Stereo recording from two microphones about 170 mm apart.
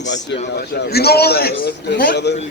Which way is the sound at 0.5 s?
70° left (ahead or behind).